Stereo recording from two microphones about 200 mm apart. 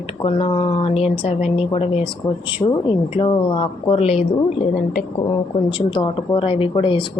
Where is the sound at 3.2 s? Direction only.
25° left (ahead or behind).